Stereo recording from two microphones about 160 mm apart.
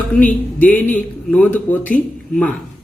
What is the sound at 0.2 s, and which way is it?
Speech, 10° left (ahead or behind).